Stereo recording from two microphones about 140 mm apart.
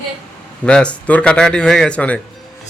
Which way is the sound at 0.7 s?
10° left (ahead or behind).